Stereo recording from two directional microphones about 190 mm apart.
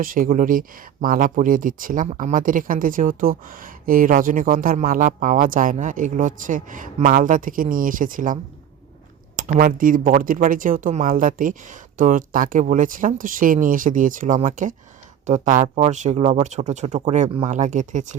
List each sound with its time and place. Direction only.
0.0 s speech: 45° right (ahead or behind)